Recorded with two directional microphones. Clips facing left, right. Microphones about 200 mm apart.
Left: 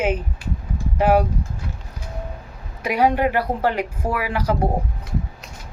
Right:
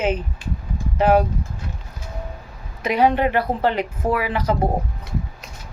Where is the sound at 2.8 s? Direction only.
10° left (ahead or behind).